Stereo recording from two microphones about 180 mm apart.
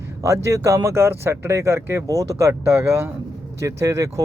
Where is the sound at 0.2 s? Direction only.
15° right (ahead or behind).